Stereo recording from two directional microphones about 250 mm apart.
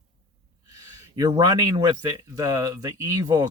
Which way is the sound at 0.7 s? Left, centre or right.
Centre.